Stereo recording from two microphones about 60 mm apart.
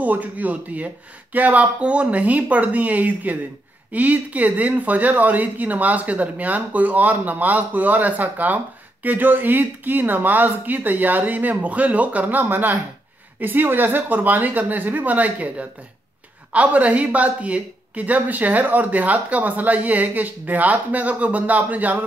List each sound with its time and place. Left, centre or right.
0.0 s speech: right